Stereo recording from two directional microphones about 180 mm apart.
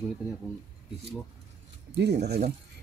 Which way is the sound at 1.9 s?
70° right (ahead or behind).